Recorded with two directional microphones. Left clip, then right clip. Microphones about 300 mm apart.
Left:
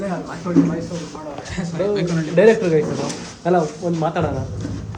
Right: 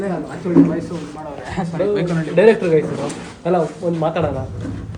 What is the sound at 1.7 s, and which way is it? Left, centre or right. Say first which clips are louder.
A man's voice: right 1 dB; centre.